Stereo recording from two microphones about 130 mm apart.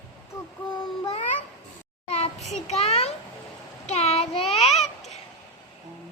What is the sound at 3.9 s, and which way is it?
Child singing, 55° left (ahead or behind).